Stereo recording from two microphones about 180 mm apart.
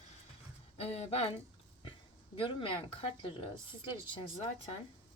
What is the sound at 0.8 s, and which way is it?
Speech, 35° left (ahead or behind).